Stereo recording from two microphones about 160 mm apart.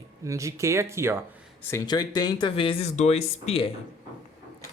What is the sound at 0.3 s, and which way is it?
Speech, 20° right (ahead or behind).